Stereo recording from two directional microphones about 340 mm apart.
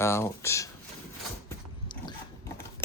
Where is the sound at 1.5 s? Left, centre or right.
Centre.